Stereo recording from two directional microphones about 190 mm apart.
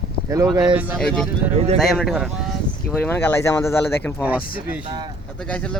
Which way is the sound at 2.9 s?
10° left (ahead or behind).